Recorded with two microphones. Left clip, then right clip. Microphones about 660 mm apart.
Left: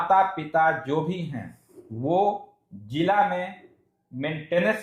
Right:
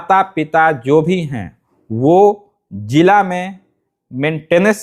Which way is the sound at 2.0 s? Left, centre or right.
Right.